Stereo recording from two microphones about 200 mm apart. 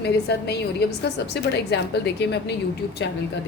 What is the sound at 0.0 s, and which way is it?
A woman's voice, 55° left (ahead or behind).